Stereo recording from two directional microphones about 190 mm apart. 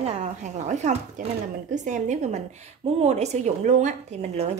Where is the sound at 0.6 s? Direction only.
40° right (ahead or behind).